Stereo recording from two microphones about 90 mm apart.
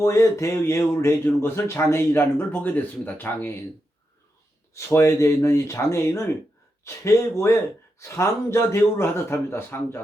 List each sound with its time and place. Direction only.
0.0 s speech: 35° left (ahead or behind)
4.7 s a man's voice: 30° left (ahead or behind)